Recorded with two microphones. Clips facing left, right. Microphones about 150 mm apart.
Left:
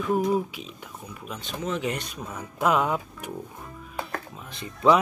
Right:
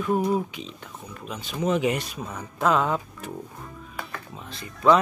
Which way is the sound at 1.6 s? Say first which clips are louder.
Right 6 dB; 15° right (ahead or behind).